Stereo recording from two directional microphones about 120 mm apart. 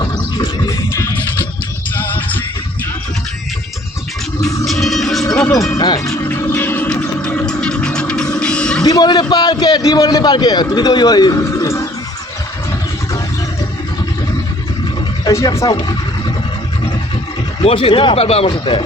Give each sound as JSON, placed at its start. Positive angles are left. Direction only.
{"t": 0.0, "sound": "a sound", "side_deg": 35}
{"t": 2.0, "sound": "music", "side_deg": 15}
{"t": 4.6, "sound": "music", "side_deg": 0}
{"t": 5.7, "sound": "music", "side_deg": 35}
{"t": 6.2, "sound": "music", "side_deg": 15}
{"t": 8.8, "sound": "a sound", "side_deg": 35}
{"t": 9.3, "sound": "a man's voice", "side_deg": 35}
{"t": 15.2, "sound": "wild animals", "side_deg": 25}
{"t": 15.5, "sound": "speech", "side_deg": 30}
{"t": 17.6, "sound": "speech", "side_deg": 50}